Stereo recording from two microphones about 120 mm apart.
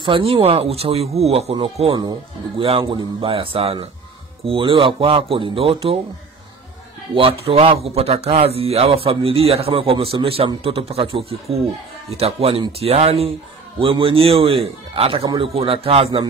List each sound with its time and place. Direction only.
0.0 s a man's voice: 50° right (ahead or behind)
7.2 s a man's voice: 50° right (ahead or behind)